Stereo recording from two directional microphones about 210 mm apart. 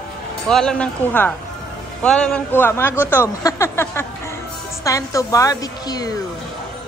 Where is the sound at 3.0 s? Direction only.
10° left (ahead or behind).